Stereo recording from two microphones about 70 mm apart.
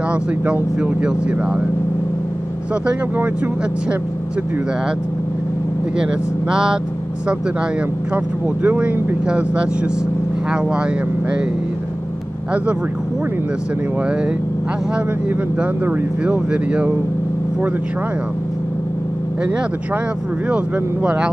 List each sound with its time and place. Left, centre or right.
0.1 s speech: centre
6.5 s speech: centre
8.6 s speech: right
16.3 s speech: centre
20.4 s speech: centre